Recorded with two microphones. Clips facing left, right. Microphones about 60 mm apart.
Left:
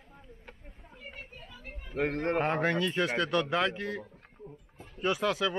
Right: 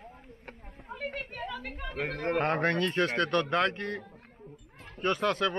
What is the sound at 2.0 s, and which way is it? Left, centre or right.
A man's voice, centre.